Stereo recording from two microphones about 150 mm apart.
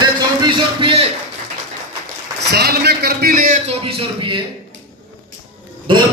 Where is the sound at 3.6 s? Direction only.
40° right (ahead or behind).